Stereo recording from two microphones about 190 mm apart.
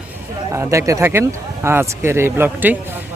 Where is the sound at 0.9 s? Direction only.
15° right (ahead or behind).